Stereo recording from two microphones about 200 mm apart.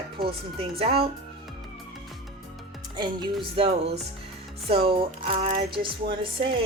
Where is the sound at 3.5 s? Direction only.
30° right (ahead or behind).